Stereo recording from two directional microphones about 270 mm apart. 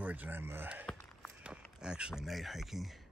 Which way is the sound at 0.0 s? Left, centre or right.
Centre.